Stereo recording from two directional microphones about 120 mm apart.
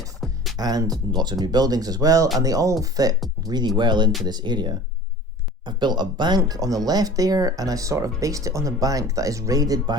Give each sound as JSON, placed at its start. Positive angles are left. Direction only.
{"t": 0.5, "sound": "speech", "side_deg": -30}